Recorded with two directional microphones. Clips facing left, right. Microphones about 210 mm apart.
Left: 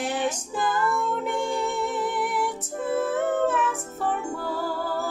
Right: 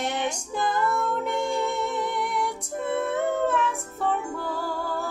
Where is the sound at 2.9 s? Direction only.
Centre (ahead or behind).